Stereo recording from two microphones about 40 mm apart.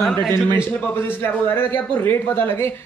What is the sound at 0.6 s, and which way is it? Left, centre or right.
A man's voice, left.